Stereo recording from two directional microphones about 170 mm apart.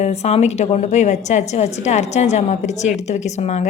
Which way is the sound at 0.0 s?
40° left (ahead or behind).